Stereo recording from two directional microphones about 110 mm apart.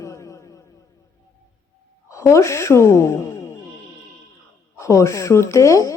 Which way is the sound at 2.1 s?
25° left (ahead or behind).